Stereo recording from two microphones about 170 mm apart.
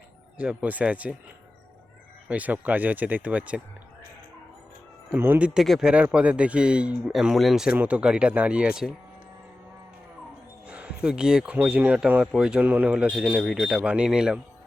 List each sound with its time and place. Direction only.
0.3 s speech: 10° right (ahead or behind)
2.3 s speech: 10° right (ahead or behind)
5.1 s speech: 10° right (ahead or behind)
10.7 s speech: 5° right (ahead or behind)